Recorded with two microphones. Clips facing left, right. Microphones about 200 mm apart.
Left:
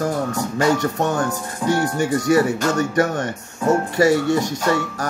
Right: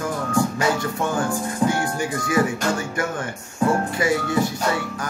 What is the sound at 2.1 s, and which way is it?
Music, 40° left (ahead or behind).